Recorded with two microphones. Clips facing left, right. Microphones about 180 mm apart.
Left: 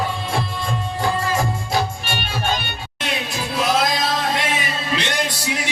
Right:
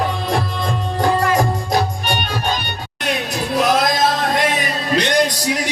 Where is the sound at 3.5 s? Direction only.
45° right (ahead or behind).